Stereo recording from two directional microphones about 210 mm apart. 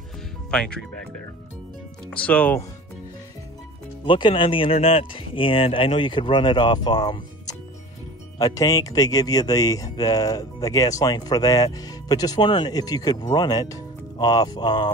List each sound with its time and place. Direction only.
0.5 s speech: 5° left (ahead or behind)
2.0 s speech: 5° left (ahead or behind)
4.0 s speech: 25° left (ahead or behind)